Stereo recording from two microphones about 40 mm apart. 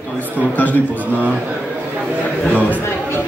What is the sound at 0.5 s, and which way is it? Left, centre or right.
Speech, left.